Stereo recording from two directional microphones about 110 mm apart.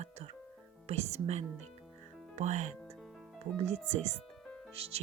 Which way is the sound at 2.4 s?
90° right.